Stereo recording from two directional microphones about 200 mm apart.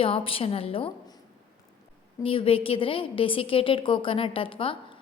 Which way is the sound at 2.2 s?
25° left (ahead or behind).